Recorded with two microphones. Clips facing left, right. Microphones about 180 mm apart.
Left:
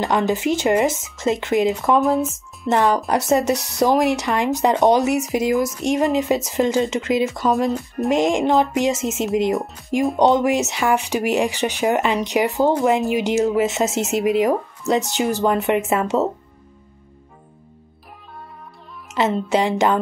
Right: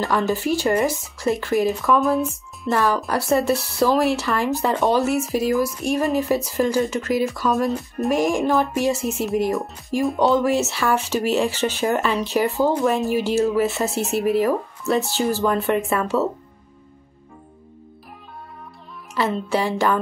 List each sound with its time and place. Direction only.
0.0 s speech: 20° left (ahead or behind)
2.0 s speech: centre (ahead or behind)
2.7 s speech: 20° left (ahead or behind)
19.1 s speech: 20° left (ahead or behind)